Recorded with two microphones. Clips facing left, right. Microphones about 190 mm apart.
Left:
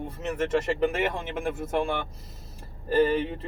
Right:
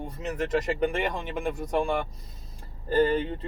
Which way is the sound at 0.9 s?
Centre (ahead or behind).